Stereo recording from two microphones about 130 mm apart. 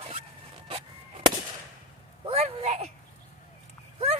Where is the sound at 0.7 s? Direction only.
50° right (ahead or behind).